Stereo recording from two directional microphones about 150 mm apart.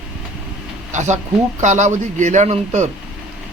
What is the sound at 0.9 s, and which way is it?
Speech, 50° right (ahead or behind).